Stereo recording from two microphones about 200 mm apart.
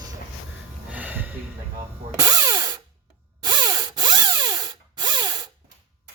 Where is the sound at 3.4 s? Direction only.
20° right (ahead or behind).